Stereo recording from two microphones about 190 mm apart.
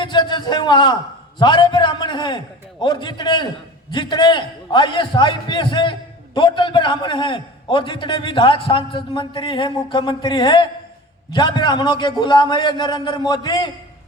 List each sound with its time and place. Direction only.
0.0 s a man's voice: 25° left (ahead or behind)